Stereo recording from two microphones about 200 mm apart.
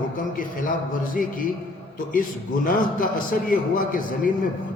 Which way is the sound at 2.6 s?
45° left (ahead or behind).